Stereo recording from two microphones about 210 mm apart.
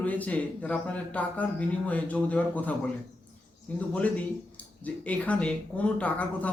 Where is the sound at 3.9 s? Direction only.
5° left (ahead or behind).